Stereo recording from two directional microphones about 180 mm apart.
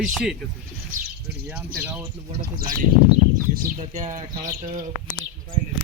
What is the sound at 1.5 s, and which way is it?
Speech, 10° right (ahead or behind).